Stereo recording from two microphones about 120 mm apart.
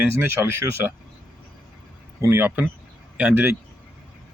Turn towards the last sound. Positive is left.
turn(degrees=-20)  # may be behind; listen again after turning